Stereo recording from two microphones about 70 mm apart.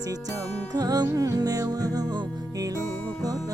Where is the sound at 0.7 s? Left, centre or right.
Right.